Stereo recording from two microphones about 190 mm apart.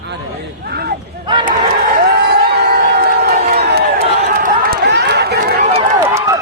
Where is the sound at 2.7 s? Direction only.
55° right (ahead or behind).